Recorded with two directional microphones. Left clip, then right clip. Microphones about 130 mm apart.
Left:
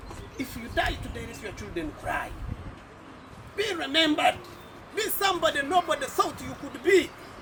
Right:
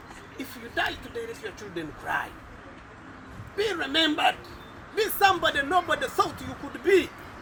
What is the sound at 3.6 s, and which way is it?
Speech, 20° left (ahead or behind).